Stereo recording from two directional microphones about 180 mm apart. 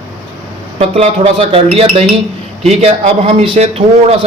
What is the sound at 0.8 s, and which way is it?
A man's voice, 35° right (ahead or behind).